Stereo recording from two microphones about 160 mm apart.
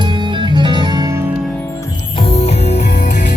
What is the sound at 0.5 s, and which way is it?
Music, 30° right (ahead or behind).